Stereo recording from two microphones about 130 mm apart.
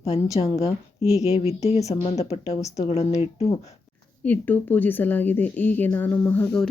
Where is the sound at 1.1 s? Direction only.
55° left (ahead or behind).